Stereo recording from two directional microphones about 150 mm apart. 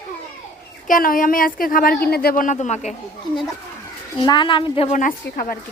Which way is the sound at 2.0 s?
90° left.